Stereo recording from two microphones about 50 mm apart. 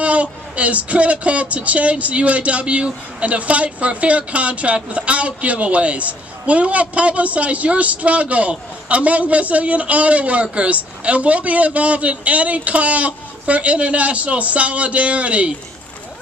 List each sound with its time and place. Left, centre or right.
0.0 s speech: right